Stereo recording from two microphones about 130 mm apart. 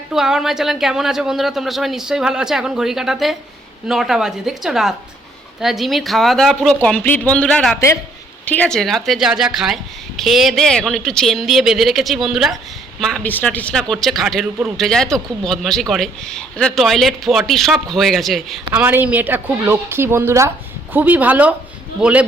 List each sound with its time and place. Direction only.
0.1 s speech: 5° right (ahead or behind)
13.2 s speech: 15° left (ahead or behind)
18.7 s a woman's voice: 15° right (ahead or behind)